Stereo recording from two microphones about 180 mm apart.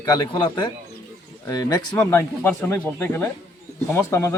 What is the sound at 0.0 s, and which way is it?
A man's voice, 25° left (ahead or behind).